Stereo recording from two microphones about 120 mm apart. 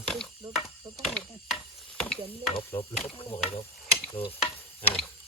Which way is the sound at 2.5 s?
50° left (ahead or behind).